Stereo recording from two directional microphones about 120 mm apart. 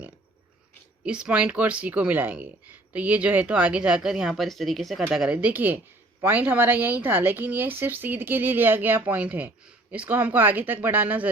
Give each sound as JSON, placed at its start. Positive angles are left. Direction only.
{"t": 1.0, "sound": "speech", "side_deg": -10}